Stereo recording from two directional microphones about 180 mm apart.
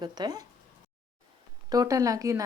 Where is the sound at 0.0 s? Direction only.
25° right (ahead or behind).